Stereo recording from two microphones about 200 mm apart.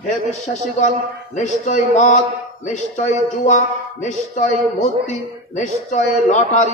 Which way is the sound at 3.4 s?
40° left (ahead or behind).